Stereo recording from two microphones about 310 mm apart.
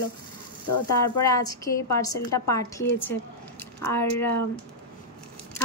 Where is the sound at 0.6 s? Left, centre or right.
Left.